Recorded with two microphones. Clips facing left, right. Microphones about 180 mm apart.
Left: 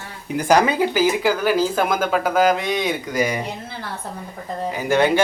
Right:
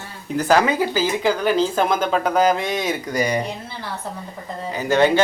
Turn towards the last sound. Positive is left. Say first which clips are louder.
# right 1 dB
turn(degrees=15)  # may be behind; listen again after turning